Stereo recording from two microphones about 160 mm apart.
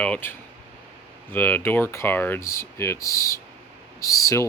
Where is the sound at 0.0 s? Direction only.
10° left (ahead or behind).